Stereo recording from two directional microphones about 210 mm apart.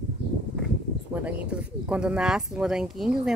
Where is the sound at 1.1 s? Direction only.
5° right (ahead or behind).